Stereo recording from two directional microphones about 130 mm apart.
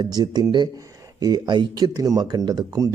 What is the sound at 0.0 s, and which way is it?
Speech, 30° right (ahead or behind).